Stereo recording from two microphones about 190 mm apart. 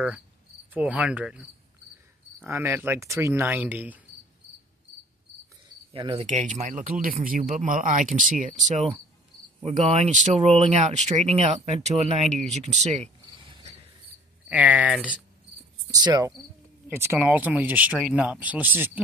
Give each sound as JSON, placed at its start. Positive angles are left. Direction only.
{"t": 0.7, "sound": "speech", "side_deg": -5}
{"t": 2.4, "sound": "speech", "side_deg": -10}
{"t": 5.9, "sound": "speech", "side_deg": -25}
{"t": 6.2, "sound": "speech", "side_deg": -40}
{"t": 12.7, "sound": "cricket", "side_deg": -35}
{"t": 14.5, "sound": "speech", "side_deg": -5}
{"t": 15.9, "sound": "speech", "side_deg": -20}